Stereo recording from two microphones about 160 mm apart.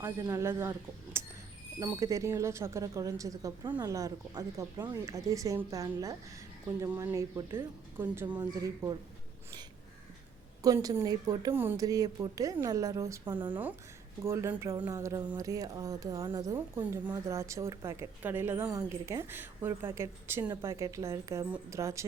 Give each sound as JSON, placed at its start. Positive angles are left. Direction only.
{"t": 0.0, "sound": "speech", "side_deg": -20}
{"t": 10.6, "sound": "speech", "side_deg": -20}
{"t": 11.5, "sound": "speech", "side_deg": -15}